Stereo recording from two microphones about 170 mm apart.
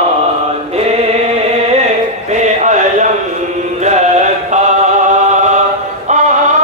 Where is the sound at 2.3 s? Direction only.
45° right (ahead or behind).